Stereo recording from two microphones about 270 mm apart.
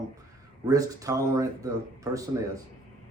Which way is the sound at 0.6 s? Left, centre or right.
Centre.